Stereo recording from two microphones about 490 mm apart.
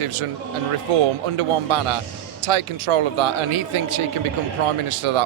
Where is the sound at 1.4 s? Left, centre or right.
Right.